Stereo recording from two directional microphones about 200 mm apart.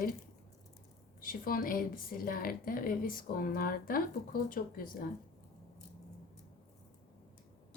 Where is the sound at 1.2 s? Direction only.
45° left (ahead or behind).